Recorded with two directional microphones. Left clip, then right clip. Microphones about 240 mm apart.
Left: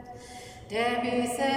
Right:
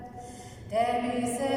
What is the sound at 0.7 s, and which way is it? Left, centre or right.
A capella, left.